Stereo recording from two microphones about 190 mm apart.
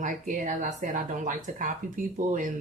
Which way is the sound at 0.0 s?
45° right (ahead or behind).